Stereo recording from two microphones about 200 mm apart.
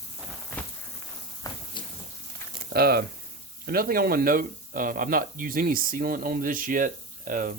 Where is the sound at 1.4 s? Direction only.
15° left (ahead or behind).